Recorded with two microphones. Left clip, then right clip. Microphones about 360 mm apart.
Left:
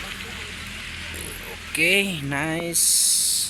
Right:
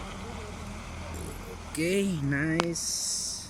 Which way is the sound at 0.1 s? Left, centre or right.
Centre.